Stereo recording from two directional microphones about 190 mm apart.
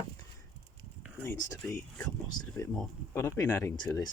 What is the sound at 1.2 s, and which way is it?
Speech, 10° left (ahead or behind).